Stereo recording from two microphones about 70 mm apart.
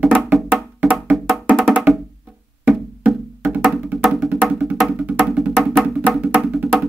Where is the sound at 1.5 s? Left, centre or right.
Centre.